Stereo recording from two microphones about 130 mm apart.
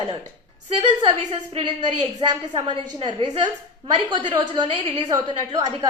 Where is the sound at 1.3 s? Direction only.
40° right (ahead or behind).